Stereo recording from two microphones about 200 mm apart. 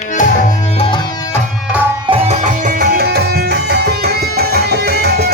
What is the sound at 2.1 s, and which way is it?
Music, 35° right (ahead or behind).